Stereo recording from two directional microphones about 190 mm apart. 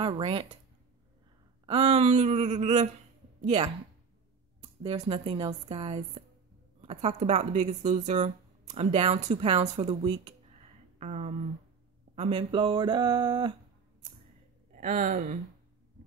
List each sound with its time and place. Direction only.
0.0 s speech: 30° right (ahead or behind)
1.7 s speech: 30° right (ahead or behind)
14.7 s speech: 40° right (ahead or behind)